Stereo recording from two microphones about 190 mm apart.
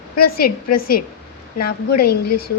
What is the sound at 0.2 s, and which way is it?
A woman's voice, 50° left (ahead or behind).